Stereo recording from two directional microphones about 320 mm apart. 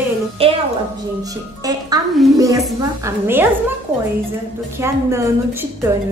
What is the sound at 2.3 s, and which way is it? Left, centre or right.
Speech, centre.